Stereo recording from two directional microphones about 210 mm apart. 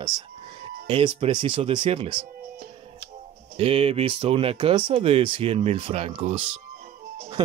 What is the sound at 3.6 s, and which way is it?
Speech, 25° right (ahead or behind).